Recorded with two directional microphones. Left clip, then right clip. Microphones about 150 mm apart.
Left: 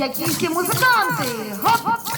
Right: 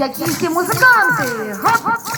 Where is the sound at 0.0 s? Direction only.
35° right (ahead or behind).